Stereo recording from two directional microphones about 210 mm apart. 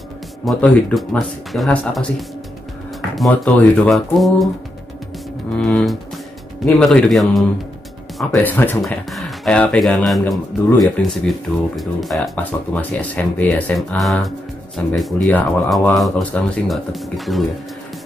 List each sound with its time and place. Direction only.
0.5 s speech: centre (ahead or behind)
5.6 s speech: centre (ahead or behind)